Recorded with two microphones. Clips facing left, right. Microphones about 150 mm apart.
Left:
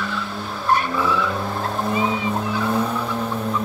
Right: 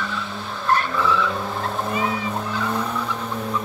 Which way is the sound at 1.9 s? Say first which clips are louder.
Left 3 dB; 15° left (ahead or behind).